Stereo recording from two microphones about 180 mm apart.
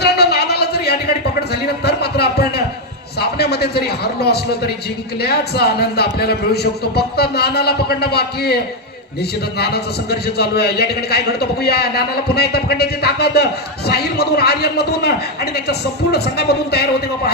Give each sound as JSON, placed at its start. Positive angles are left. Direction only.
{"t": 0.0, "sound": "a sound", "side_deg": 65}
{"t": 3.2, "sound": "a man's voice", "side_deg": 65}
{"t": 9.6, "sound": "a man's voice", "side_deg": 65}